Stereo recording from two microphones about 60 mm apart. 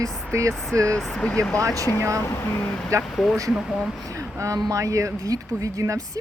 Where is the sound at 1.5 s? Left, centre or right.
Right.